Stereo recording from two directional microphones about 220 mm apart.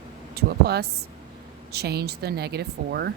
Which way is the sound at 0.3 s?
45° right (ahead or behind).